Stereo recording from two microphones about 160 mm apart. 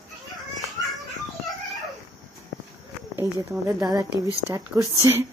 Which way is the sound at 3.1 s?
20° right (ahead or behind).